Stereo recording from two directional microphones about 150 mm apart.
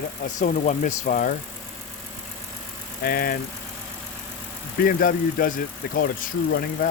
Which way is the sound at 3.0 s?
80° left.